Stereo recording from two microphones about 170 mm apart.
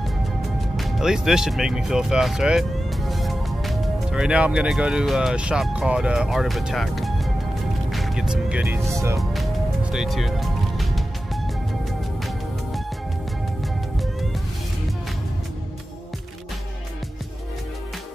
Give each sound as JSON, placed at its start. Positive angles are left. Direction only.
{"t": 0.7, "sound": "speech", "side_deg": 0}
{"t": 7.9, "sound": "music", "side_deg": 0}
{"t": 8.9, "sound": "speech", "side_deg": -20}
{"t": 9.3, "sound": "music", "side_deg": 0}